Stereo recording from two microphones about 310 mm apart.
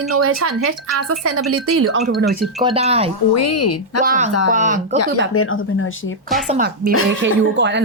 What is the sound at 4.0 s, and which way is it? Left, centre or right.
Speech, right.